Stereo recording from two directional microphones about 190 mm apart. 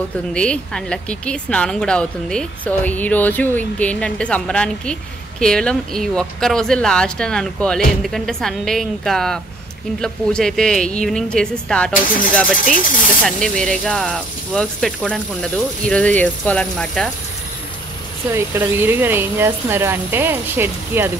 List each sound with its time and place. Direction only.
0.3 s speech: 5° left (ahead or behind)
12.6 s speech: 45° left (ahead or behind)
13.2 s speech: 5° left (ahead or behind)
18.3 s speech: 10° right (ahead or behind)